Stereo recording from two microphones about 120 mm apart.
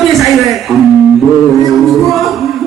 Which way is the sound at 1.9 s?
Centre (ahead or behind).